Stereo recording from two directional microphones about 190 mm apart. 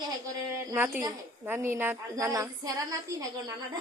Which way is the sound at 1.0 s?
15° right (ahead or behind).